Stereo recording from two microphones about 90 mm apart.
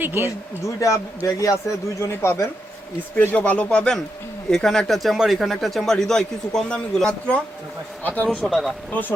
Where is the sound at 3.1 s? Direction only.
15° left (ahead or behind).